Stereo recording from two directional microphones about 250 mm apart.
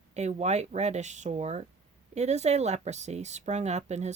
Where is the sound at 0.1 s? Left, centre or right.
Right.